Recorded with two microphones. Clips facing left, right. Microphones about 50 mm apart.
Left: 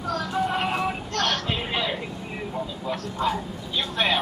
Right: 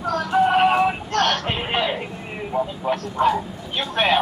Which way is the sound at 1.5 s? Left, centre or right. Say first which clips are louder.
Right 4 dB; right.